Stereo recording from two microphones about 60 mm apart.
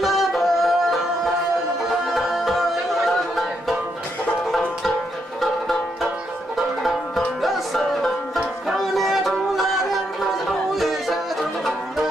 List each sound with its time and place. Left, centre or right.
0.0 s music: centre
4.5 s banjo: centre
6.5 s music: centre